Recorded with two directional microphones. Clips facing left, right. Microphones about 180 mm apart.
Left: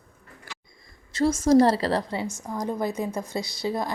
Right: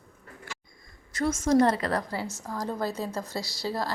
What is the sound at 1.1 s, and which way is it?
A woman's voice, 30° left (ahead or behind).